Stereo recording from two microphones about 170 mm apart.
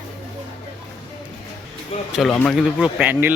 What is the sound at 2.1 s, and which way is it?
Speech, 5° left (ahead or behind).